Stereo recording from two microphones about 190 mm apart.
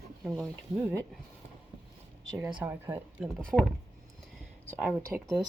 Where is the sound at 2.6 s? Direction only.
10° right (ahead or behind).